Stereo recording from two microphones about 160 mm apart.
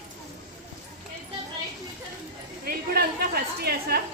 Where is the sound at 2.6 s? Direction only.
70° right (ahead or behind).